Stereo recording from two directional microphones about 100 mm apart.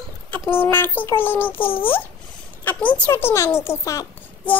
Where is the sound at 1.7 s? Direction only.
65° left (ahead or behind).